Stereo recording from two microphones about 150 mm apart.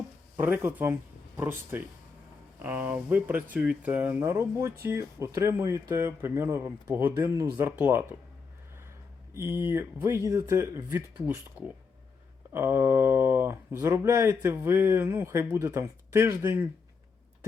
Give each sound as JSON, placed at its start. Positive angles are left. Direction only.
{"t": 0.3, "sound": "speech", "side_deg": -15}
{"t": 9.3, "sound": "speech", "side_deg": -15}
{"t": 12.5, "sound": "speech", "side_deg": -15}